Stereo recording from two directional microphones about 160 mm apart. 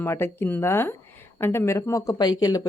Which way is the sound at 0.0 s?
15° left (ahead or behind).